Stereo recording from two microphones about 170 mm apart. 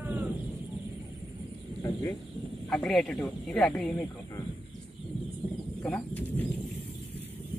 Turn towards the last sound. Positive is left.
turn(degrees=10)  # may be behind; listen again after turning